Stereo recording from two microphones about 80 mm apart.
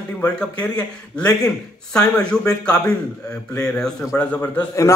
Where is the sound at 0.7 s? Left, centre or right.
Centre.